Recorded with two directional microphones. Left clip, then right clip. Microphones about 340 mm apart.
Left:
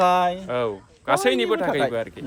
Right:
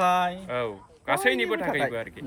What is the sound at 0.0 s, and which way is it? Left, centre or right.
Speech, centre.